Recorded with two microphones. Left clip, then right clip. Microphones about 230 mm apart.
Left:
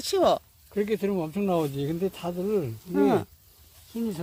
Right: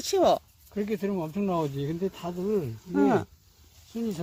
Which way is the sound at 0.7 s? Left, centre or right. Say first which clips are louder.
Left 4 dB; left.